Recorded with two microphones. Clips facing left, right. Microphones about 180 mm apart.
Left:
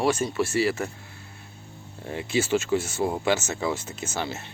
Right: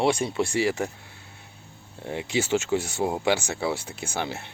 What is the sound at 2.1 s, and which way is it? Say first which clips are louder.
Speech: left 1 dB; 15° right (ahead or behind).